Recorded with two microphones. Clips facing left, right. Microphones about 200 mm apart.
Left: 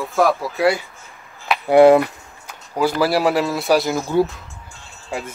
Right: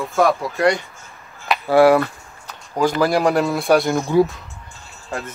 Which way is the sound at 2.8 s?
5° left (ahead or behind).